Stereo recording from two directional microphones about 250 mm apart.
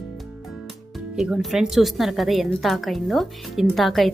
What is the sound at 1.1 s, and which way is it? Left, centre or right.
A woman's voice, centre.